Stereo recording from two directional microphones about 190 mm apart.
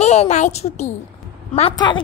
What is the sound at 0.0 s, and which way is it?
A woman's voice, 35° left (ahead or behind).